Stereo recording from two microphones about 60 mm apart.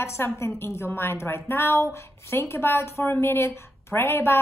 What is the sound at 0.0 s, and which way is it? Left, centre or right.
A woman's voice, left.